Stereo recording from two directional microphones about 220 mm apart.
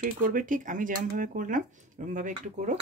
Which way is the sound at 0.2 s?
35° right (ahead or behind).